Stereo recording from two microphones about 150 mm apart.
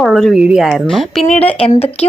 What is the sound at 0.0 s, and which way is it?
A woman's voice, centre (ahead or behind).